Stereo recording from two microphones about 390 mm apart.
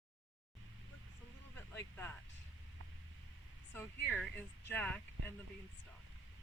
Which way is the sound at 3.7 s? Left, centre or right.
Centre.